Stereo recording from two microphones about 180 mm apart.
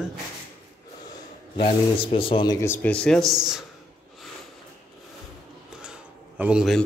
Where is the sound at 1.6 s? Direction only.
30° left (ahead or behind).